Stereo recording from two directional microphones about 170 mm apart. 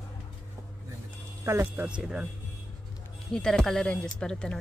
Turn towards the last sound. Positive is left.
turn(degrees=5)  # may be behind; listen again after turning